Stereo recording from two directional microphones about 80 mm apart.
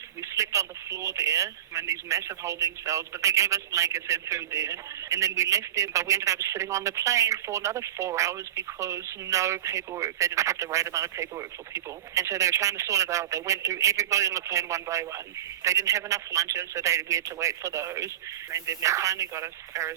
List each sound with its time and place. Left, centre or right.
0.2 s speech: right